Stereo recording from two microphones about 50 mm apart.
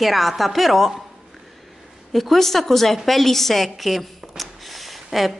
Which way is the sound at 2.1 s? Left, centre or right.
Centre.